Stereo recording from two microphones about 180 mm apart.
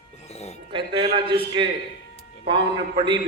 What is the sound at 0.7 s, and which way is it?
Speech, 30° right (ahead or behind).